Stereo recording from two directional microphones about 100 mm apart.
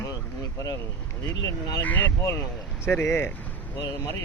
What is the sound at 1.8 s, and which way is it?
A man's voice, 15° left (ahead or behind).